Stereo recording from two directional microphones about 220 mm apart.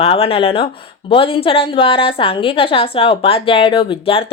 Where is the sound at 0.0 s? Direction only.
25° left (ahead or behind).